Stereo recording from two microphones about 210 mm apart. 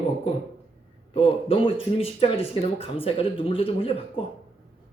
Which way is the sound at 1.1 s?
25° left (ahead or behind).